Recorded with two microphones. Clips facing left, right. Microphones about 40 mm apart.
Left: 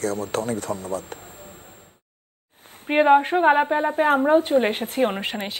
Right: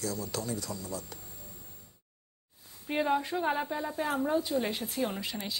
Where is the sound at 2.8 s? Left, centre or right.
Left.